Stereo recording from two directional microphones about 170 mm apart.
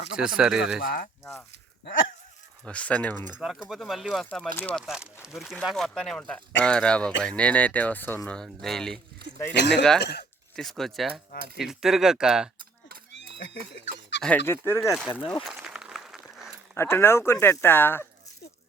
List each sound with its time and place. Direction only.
0.2 s speech: 5° right (ahead or behind)
0.8 s speech: 60° left (ahead or behind)
2.6 s speech: 10° left (ahead or behind)
3.3 s speech: 5° right (ahead or behind)
4.9 s speech: 5° right (ahead or behind)
9.6 s speech: 90° left
10.0 s speech: 75° left (ahead or behind)
10.5 s speech: centre (ahead or behind)
13.1 s a sound: 90° left
14.2 s speech: 10° left (ahead or behind)
14.8 s speech: centre (ahead or behind)
15.2 s speech: 30° left (ahead or behind)
15.4 s a sound: 5° right (ahead or behind)
16.7 s speech: 15° left (ahead or behind)